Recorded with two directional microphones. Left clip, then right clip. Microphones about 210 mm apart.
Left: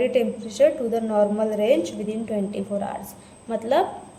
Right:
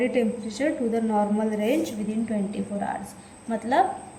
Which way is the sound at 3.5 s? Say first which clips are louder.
Left 1 dB; 50° left (ahead or behind).